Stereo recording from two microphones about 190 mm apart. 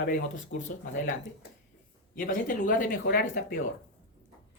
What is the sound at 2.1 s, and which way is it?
Speech, 45° left (ahead or behind).